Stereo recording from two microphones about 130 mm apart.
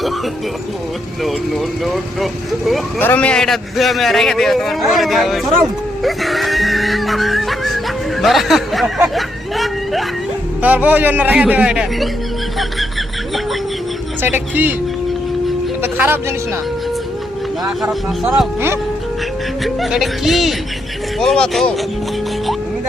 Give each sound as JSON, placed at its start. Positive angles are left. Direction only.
{"t": 1.2, "sound": "a man's voice", "side_deg": 0}
{"t": 3.0, "sound": "a man's voice", "side_deg": 15}
{"t": 10.6, "sound": "a man's voice", "side_deg": -10}
{"t": 14.2, "sound": "a man's voice", "side_deg": -15}
{"t": 15.8, "sound": "speech", "side_deg": -15}
{"t": 17.8, "sound": "a man's voice", "side_deg": -5}
{"t": 19.6, "sound": "a man's voice", "side_deg": 0}